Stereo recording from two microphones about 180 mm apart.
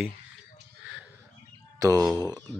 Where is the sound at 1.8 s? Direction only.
20° right (ahead or behind).